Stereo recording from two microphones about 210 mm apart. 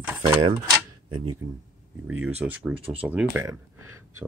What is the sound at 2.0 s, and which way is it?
Speech, 10° right (ahead or behind).